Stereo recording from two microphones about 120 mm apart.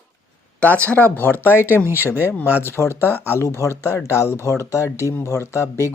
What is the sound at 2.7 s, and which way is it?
Speech, 20° left (ahead or behind).